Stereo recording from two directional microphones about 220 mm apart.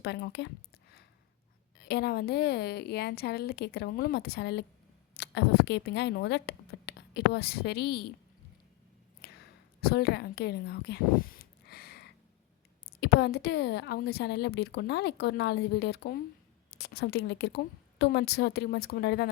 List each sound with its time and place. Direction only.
0.0 s a woman's voice: 50° left (ahead or behind)
1.8 s a woman's voice: 50° left (ahead or behind)
9.2 s a sound: 45° left (ahead or behind)
9.8 s a woman's voice: 45° left (ahead or behind)